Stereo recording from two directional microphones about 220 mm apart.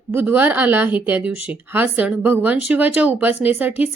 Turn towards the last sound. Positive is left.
turn(degrees=-10)  # may be behind; listen again after turning